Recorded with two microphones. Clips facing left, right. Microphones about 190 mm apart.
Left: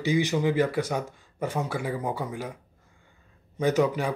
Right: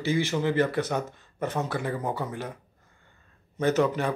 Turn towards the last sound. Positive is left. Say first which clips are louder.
# even
turn(degrees=10)  # may be behind; listen again after turning